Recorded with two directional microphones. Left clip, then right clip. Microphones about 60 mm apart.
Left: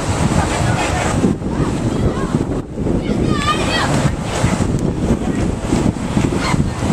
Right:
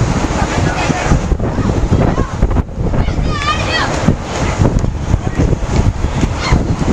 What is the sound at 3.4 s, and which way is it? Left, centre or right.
Waves, right.